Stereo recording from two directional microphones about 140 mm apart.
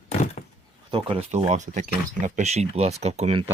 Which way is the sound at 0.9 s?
40° right (ahead or behind).